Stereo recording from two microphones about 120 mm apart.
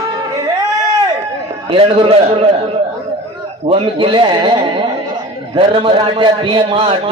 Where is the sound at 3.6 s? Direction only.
45° right (ahead or behind).